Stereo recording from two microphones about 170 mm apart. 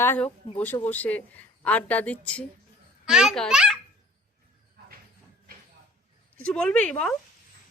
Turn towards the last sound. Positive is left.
turn(degrees=5)  # may be behind; listen again after turning